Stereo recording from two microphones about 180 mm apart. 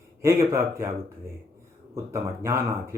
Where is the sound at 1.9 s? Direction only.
15° right (ahead or behind).